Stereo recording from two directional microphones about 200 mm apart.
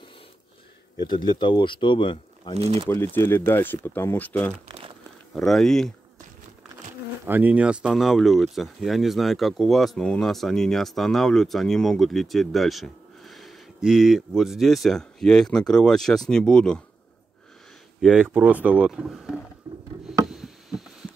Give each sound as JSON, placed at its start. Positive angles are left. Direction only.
{"t": 0.9, "sound": "speech", "side_deg": 20}
{"t": 2.5, "sound": "speech", "side_deg": -30}
{"t": 3.2, "sound": "speech", "side_deg": 10}
{"t": 7.2, "sound": "speech", "side_deg": -10}
{"t": 18.0, "sound": "speech", "side_deg": -5}
{"t": 19.7, "sound": "a sound", "side_deg": -20}
{"t": 20.2, "sound": "a sound", "side_deg": 0}